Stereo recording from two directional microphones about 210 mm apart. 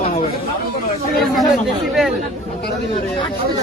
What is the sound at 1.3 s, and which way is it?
Speech, centre (ahead or behind).